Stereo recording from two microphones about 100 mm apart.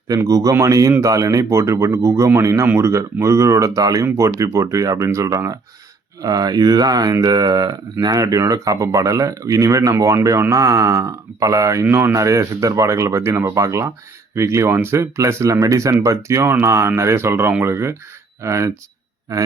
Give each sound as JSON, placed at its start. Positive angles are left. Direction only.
{"t": 0.1, "sound": "speech", "side_deg": -35}